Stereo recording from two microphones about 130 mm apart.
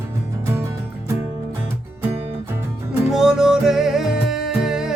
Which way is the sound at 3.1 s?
5° right (ahead or behind).